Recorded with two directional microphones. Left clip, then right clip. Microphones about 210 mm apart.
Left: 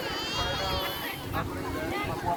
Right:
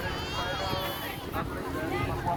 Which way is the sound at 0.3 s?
55° right (ahead or behind).